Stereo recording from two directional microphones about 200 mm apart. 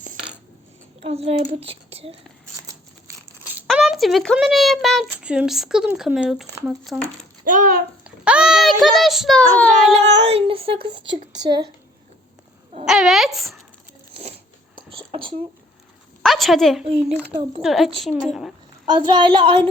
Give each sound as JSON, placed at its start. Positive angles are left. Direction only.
{"t": 1.0, "sound": "speech", "side_deg": -30}
{"t": 2.6, "sound": "crumpling", "side_deg": -15}
{"t": 3.7, "sound": "a woman's voice", "side_deg": 0}
{"t": 7.4, "sound": "a child's voice", "side_deg": -40}
{"t": 8.0, "sound": "a sound", "side_deg": -5}
{"t": 8.8, "sound": "a woman's voice", "side_deg": 0}
{"t": 10.2, "sound": "speech", "side_deg": -30}
{"t": 12.8, "sound": "a woman's voice", "side_deg": 0}
{"t": 14.1, "sound": "a sound", "side_deg": -30}
{"t": 16.2, "sound": "a sound", "side_deg": 0}
{"t": 16.9, "sound": "speech", "side_deg": -30}
{"t": 17.6, "sound": "a woman's voice", "side_deg": 0}
{"t": 19.1, "sound": "speech", "side_deg": -25}